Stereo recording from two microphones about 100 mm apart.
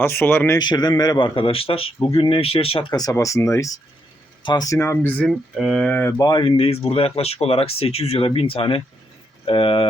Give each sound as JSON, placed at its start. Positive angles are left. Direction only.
{"t": 0.0, "sound": "speech", "side_deg": 20}
{"t": 0.6, "sound": "a man's voice", "side_deg": 45}
{"t": 1.4, "sound": "speech", "side_deg": 70}
{"t": 2.9, "sound": "speech", "side_deg": 35}
{"t": 4.4, "sound": "a man's voice", "side_deg": 45}
{"t": 4.7, "sound": "speech", "side_deg": 20}
{"t": 5.3, "sound": "speech", "side_deg": 0}
{"t": 6.1, "sound": "speech", "side_deg": 40}
{"t": 6.4, "sound": "speech", "side_deg": 70}
{"t": 8.3, "sound": "speech", "side_deg": 70}